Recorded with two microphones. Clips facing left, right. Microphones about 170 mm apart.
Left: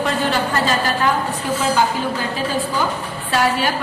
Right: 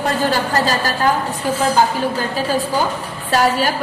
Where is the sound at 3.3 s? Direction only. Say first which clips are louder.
Right 3 dB; 40° right (ahead or behind).